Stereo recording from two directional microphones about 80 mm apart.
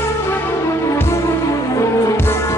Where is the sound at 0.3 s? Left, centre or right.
Left.